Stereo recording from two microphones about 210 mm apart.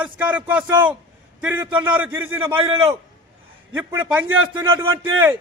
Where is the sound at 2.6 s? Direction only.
25° right (ahead or behind).